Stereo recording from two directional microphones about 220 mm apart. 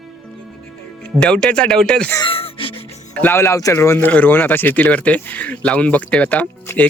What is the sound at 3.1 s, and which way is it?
Speech, 10° left (ahead or behind).